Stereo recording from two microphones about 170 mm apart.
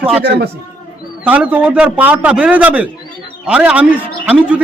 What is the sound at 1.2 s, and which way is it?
A man's voice, 10° right (ahead or behind).